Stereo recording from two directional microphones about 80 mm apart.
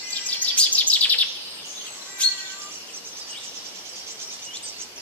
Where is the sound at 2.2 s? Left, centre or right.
Centre.